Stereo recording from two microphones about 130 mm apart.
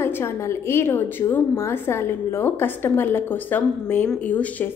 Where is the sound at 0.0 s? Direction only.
20° left (ahead or behind).